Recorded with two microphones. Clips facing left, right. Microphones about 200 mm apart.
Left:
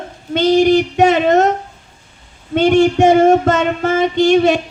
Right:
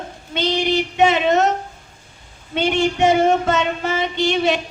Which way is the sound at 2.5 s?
50° left (ahead or behind).